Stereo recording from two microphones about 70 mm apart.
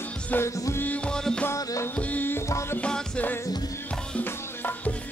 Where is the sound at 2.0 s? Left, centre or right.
Left.